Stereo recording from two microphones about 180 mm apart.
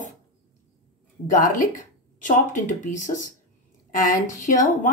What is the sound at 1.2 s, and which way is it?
A woman's voice, 45° left (ahead or behind).